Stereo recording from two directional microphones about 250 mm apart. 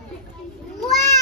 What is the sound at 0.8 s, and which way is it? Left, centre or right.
Cat, centre.